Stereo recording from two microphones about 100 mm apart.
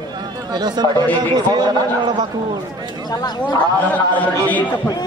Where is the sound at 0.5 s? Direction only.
45° right (ahead or behind).